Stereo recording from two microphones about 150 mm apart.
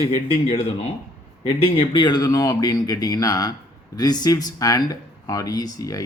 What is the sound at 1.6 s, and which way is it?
Speech, 30° left (ahead or behind).